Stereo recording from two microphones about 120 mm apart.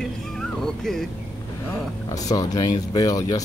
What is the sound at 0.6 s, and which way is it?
Speech, 5° left (ahead or behind).